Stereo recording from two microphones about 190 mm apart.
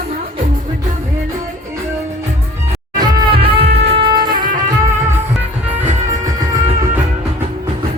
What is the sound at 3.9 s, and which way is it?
Music, 25° right (ahead or behind).